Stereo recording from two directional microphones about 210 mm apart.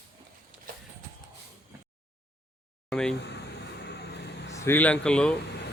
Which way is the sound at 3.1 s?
55° left (ahead or behind).